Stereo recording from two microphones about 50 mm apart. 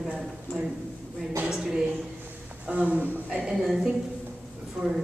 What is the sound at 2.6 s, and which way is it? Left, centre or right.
Speech, right.